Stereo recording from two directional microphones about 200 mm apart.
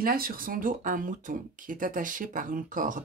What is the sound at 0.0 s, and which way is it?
Speech, 45° right (ahead or behind).